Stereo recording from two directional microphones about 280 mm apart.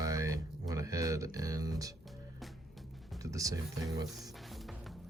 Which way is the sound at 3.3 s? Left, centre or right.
Centre.